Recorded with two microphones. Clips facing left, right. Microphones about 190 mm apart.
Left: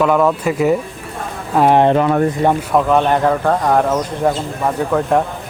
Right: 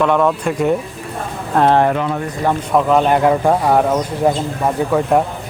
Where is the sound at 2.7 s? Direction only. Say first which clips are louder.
Right 4 dB; centre (ahead or behind).